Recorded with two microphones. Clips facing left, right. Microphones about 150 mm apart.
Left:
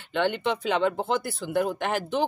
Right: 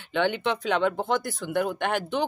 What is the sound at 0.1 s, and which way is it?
Speech, 5° left (ahead or behind).